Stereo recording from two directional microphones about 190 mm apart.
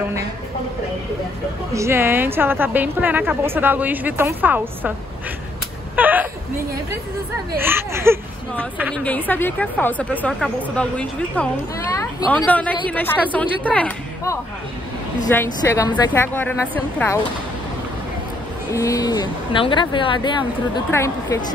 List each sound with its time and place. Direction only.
1.7 s a woman's voice: 15° right (ahead or behind)
5.9 s a sound: 10° right (ahead or behind)
7.5 s a woman's voice: 10° right (ahead or behind)
8.7 s a woman's voice: 5° left (ahead or behind)
18.7 s speech: 15° left (ahead or behind)